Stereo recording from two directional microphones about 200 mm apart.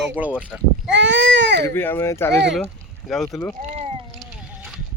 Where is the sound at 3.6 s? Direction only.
30° right (ahead or behind).